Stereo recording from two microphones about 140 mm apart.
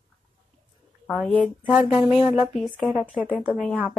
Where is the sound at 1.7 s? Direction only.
10° right (ahead or behind).